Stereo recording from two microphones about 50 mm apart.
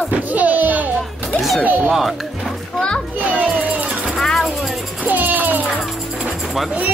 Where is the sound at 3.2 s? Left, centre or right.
Right.